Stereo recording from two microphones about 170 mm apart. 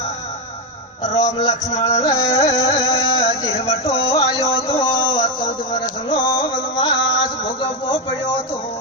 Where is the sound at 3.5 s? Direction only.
40° left (ahead or behind).